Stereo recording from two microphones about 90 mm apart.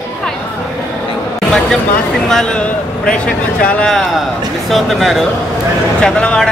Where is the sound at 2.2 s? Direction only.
5° left (ahead or behind).